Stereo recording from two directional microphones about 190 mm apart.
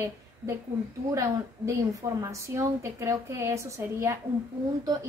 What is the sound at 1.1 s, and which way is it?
A woman's voice, 15° right (ahead or behind).